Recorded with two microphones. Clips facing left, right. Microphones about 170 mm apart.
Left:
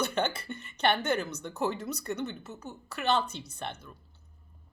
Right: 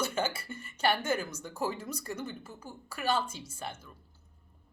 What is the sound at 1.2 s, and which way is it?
Speech, 65° left (ahead or behind).